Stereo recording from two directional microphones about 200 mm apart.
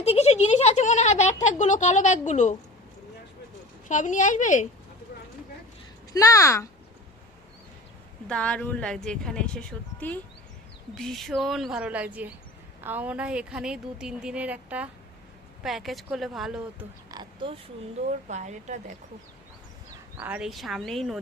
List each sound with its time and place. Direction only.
0.0 s speech: 30° left (ahead or behind)
3.8 s speech: 40° left (ahead or behind)
6.1 s speech: 15° left (ahead or behind)
8.3 s a woman's voice: 5° left (ahead or behind)
17.1 s oink: 25° right (ahead or behind)
18.3 s a woman's voice: 35° right (ahead or behind)
20.1 s a woman's voice: 5° right (ahead or behind)